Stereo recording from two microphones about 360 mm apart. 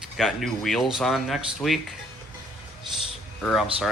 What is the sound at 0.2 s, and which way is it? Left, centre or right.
Speech, centre.